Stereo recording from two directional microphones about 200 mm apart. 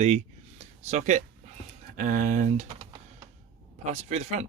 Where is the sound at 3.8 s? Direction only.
35° right (ahead or behind).